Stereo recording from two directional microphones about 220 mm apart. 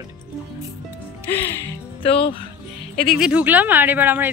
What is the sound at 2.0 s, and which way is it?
Speech, 25° left (ahead or behind).